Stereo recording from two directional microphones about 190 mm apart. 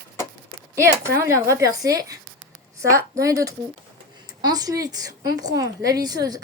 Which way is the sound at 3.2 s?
15° right (ahead or behind).